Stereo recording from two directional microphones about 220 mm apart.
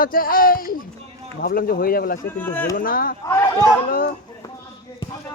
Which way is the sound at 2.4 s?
10° left (ahead or behind).